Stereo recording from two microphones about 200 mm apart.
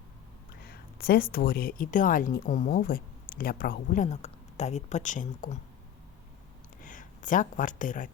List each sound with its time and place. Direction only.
0.6 s speech: 50° left (ahead or behind)
6.8 s speech: 40° left (ahead or behind)